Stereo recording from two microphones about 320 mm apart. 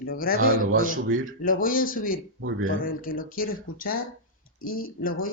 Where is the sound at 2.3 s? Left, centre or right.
Right.